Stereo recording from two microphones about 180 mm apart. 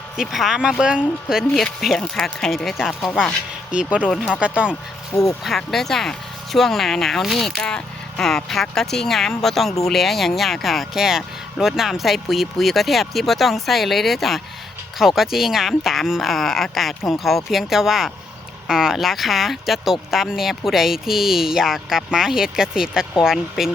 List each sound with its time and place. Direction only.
0.2 s speech: centre (ahead or behind)
4.7 s speech: 15° left (ahead or behind)
5.4 s speech: centre (ahead or behind)